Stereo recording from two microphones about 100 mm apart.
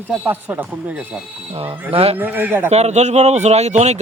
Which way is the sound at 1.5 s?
65° right (ahead or behind).